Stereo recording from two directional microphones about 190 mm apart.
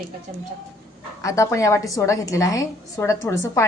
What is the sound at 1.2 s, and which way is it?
A woman's voice, 15° left (ahead or behind).